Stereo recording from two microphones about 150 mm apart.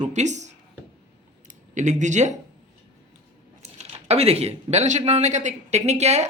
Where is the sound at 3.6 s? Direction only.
45° right (ahead or behind).